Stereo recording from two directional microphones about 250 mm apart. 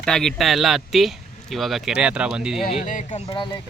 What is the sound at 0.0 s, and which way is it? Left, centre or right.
Speech, centre.